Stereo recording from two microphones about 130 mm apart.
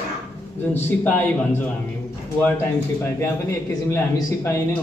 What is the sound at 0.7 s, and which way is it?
A man's voice, 15° left (ahead or behind).